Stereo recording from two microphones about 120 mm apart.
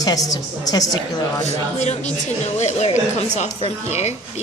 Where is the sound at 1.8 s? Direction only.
70° left (ahead or behind).